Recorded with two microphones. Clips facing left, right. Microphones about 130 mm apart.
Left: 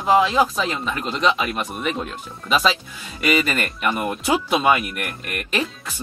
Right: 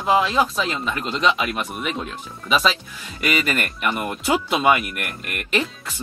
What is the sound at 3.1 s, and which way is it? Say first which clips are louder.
Speech: left 2 dB; 5° left (ahead or behind).